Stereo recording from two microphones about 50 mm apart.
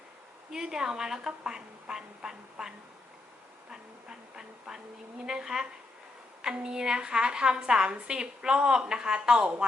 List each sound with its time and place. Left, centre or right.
0.5 s a woman's voice: centre